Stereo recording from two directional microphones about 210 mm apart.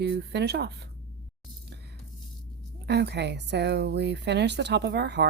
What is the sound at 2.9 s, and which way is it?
Speech, 55° right (ahead or behind).